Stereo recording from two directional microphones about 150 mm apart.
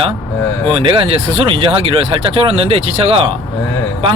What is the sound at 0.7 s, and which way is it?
Speech, 35° right (ahead or behind).